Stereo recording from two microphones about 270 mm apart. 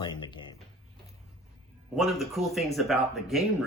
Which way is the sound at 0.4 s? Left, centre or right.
Centre.